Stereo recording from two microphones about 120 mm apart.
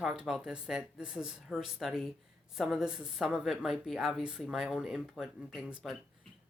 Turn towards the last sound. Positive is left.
turn(degrees=-5)  # may be behind; listen again after turning